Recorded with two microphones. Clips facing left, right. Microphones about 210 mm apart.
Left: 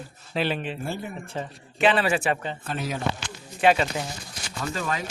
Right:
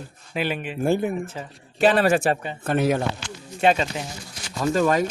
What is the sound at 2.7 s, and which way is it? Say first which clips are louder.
Speech: right 11 dB; 60° right (ahead or behind).